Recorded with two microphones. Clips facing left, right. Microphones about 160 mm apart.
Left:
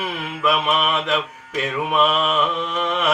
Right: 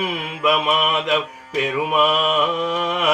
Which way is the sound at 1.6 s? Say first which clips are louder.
Right 1 dB; 15° right (ahead or behind).